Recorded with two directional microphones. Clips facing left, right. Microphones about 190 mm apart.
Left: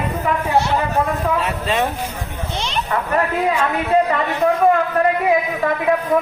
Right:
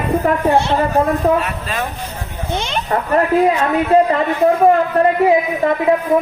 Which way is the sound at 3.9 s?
30° right (ahead or behind).